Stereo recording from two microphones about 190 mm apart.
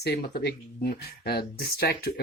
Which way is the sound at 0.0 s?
55° left (ahead or behind).